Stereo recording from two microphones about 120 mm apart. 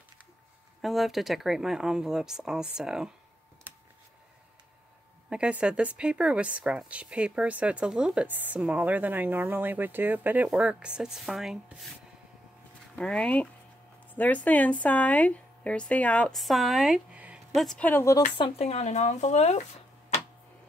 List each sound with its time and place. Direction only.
0.8 s speech: centre (ahead or behind)
5.3 s a woman's voice: 10° right (ahead or behind)
12.9 s speech: 10° left (ahead or behind)
16.3 s speech: centre (ahead or behind)
17.6 s speech: 5° left (ahead or behind)
17.8 s speech: 15° left (ahead or behind)
18.4 s speech: 60° left (ahead or behind)